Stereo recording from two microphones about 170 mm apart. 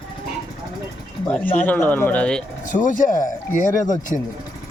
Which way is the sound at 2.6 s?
50° left (ahead or behind).